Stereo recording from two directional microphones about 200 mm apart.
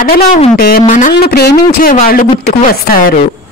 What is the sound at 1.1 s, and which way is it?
Speech, 55° left (ahead or behind).